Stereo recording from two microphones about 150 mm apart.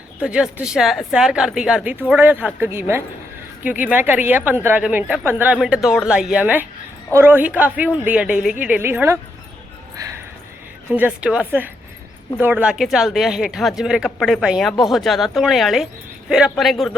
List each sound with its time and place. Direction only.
0.2 s a woman's voice: 5° right (ahead or behind)
10.9 s a woman's voice: 10° right (ahead or behind)
14.4 s speech: 5° right (ahead or behind)